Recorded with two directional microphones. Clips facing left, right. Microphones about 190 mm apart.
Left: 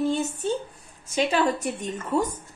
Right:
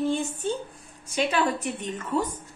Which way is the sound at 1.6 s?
45° left (ahead or behind).